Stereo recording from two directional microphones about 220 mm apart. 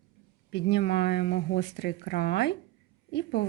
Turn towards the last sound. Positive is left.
turn(degrees=50)  # may be behind; listen again after turning